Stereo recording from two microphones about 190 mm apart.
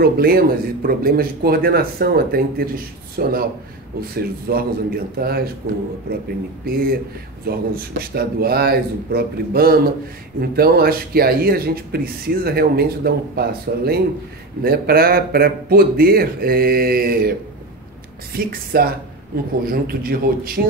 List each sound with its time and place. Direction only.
0.0 s speech: 55° right (ahead or behind)
6.6 s speech: 50° right (ahead or behind)